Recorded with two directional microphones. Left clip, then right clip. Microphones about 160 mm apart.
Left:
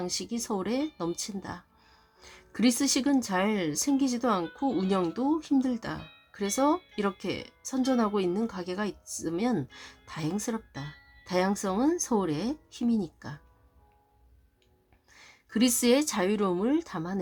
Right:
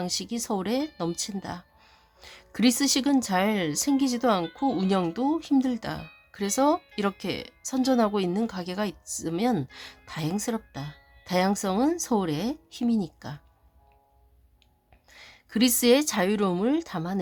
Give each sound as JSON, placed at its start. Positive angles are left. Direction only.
{"t": 0.0, "sound": "speech", "side_deg": -25}
{"t": 15.1, "sound": "a woman's voice", "side_deg": -25}